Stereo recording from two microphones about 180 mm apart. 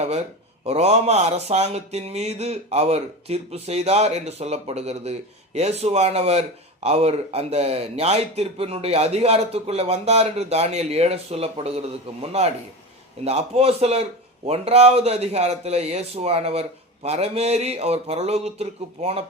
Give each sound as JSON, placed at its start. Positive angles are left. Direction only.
{"t": 0.6, "sound": "a man's voice", "side_deg": -35}